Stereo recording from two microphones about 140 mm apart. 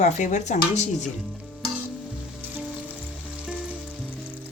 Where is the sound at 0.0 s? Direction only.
60° left (ahead or behind).